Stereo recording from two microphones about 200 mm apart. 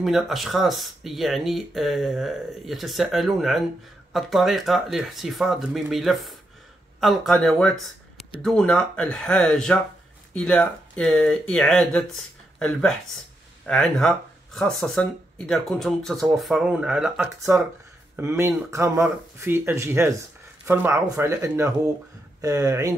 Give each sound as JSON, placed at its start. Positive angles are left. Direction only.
{"t": 0.0, "sound": "speech", "side_deg": 0}